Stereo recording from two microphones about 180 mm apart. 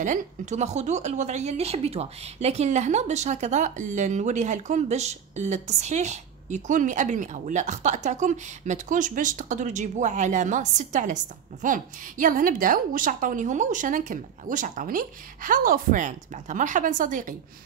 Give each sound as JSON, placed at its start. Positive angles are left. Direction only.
{"t": 0.0, "sound": "a woman's voice", "side_deg": -40}